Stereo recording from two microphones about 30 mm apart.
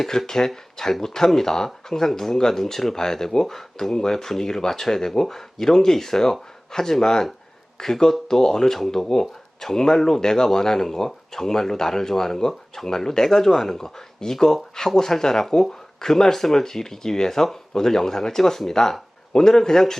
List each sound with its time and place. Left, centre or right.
0.3 s speech: centre